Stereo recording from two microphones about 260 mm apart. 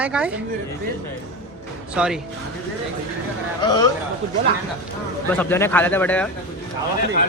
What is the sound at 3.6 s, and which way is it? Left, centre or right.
Speech, centre.